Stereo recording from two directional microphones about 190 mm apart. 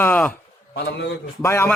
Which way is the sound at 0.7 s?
60° left (ahead or behind).